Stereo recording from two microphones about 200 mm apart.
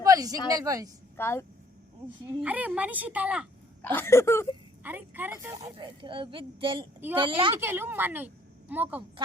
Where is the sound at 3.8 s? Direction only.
10° left (ahead or behind).